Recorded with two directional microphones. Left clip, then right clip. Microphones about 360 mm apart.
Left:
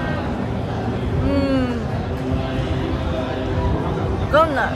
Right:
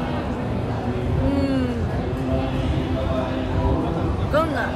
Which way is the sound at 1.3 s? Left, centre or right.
Centre.